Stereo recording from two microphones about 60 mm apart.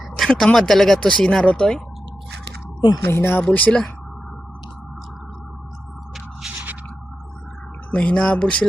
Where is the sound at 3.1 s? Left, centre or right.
Left.